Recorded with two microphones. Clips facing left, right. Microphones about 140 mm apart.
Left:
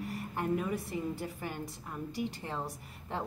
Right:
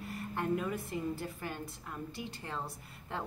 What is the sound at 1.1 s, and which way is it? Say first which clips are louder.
A woman's voice: left 1 dB; 15° left (ahead or behind).